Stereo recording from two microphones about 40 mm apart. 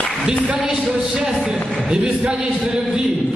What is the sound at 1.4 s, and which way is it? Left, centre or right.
Speech, centre.